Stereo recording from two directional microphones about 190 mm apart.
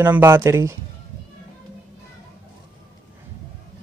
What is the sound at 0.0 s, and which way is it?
Speech, 10° right (ahead or behind).